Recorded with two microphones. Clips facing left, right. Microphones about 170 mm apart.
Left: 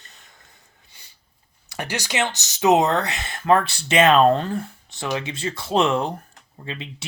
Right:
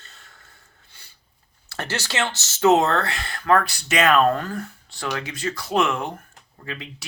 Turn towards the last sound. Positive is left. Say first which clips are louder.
# left 1 dB
turn(degrees=25)  # may be behind; listen again after turning